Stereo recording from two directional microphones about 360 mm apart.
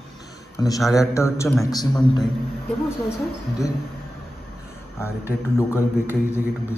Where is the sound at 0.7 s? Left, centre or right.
Centre.